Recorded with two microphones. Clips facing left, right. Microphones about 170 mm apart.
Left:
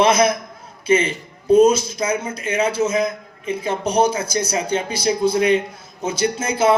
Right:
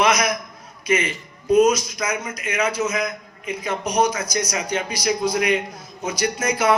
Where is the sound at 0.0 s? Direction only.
30° left (ahead or behind).